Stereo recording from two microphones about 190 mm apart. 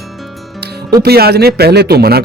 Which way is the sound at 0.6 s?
55° right (ahead or behind).